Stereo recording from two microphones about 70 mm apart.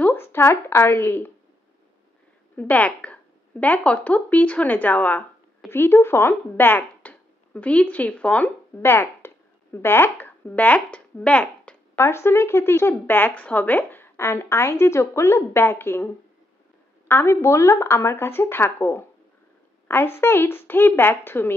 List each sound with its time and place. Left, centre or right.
0.0 s a woman's voice: left
2.7 s speech: left
8.8 s a sound: left; by 12.0 s centre
12.0 s speech: left
17.1 s speech: left